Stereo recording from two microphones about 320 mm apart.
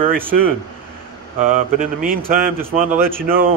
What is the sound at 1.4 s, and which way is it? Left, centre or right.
A man's voice, right.